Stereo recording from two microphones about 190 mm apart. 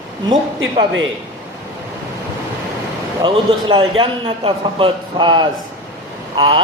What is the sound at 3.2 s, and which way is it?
A man's voice, 25° right (ahead or behind).